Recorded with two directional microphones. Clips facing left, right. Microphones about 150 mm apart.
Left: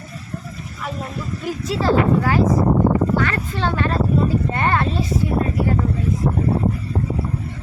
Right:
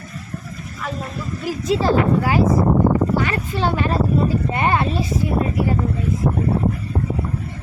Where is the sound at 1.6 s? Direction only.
15° right (ahead or behind).